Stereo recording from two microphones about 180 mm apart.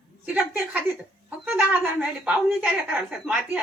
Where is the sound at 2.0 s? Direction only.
5° right (ahead or behind).